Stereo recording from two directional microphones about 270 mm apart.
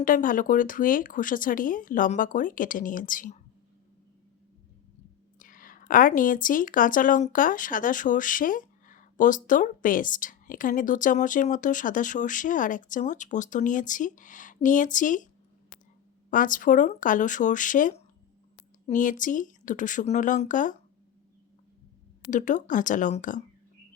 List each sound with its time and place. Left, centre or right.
0.0 s speech: left
5.4 s speech: left
16.3 s speech: left
22.3 s speech: left